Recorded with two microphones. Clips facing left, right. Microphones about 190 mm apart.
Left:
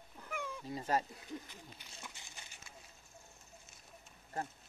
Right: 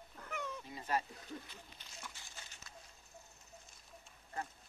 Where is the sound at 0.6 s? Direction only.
40° left (ahead or behind).